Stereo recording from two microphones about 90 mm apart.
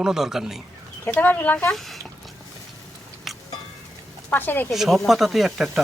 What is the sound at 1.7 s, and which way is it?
Speech, centre (ahead or behind).